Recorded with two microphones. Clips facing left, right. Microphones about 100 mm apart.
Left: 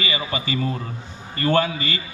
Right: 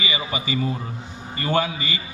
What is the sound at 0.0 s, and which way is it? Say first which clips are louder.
A man's voice: left 1 dB; 15° right (ahead or behind).